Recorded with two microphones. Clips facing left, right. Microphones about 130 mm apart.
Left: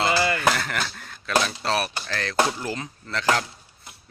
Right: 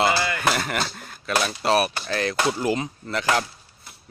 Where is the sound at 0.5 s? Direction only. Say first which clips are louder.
Right 2 dB; 15° right (ahead or behind).